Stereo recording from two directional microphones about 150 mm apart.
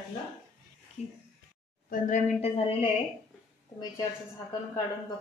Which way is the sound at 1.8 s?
60° left (ahead or behind).